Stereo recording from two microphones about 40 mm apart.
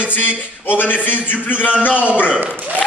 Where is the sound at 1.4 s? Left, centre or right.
Left.